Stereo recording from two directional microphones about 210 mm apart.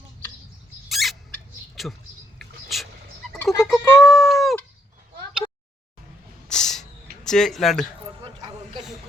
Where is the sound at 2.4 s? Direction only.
Centre (ahead or behind).